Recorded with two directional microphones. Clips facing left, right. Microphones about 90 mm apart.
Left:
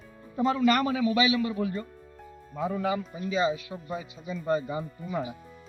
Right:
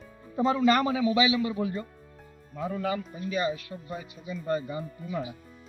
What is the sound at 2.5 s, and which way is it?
Speech, 10° left (ahead or behind).